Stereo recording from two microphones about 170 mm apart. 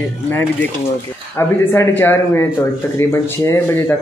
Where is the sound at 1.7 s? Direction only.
10° left (ahead or behind).